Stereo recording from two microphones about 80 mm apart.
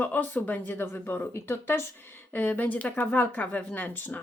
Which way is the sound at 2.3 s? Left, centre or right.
Left.